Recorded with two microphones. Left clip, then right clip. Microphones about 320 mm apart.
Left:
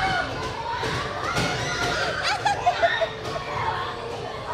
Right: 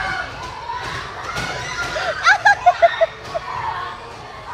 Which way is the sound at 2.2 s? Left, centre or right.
Centre.